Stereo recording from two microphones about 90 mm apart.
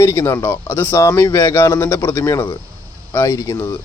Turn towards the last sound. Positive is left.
turn(degrees=35)  # may be behind; listen again after turning